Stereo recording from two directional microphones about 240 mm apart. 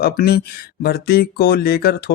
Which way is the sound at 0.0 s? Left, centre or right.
Left.